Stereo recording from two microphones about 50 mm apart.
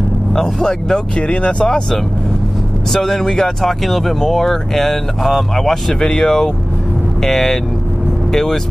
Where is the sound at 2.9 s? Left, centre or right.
Centre.